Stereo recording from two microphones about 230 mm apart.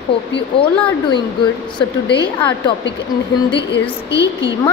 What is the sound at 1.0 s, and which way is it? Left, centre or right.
Speech, centre.